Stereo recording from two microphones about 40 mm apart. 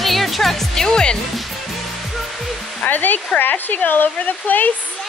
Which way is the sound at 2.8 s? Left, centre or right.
Left.